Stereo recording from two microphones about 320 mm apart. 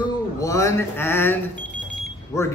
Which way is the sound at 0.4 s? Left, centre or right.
Centre.